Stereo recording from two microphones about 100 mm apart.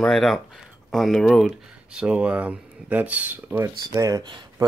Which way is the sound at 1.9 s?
10° right (ahead or behind).